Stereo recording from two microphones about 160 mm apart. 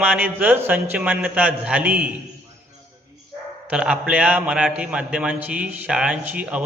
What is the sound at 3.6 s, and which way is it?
A man's voice, 5° right (ahead or behind).